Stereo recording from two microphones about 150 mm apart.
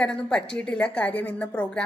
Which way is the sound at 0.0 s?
5° left (ahead or behind).